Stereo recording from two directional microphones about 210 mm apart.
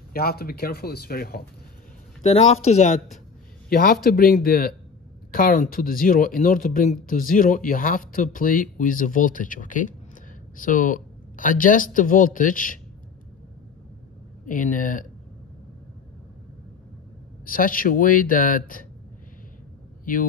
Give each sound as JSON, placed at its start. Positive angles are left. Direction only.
{"t": 0.1, "sound": "speech", "side_deg": 45}
{"t": 2.2, "sound": "speech", "side_deg": 30}
{"t": 3.7, "sound": "speech", "side_deg": 45}
{"t": 14.4, "sound": "speech", "side_deg": 40}
{"t": 17.5, "sound": "speech", "side_deg": 40}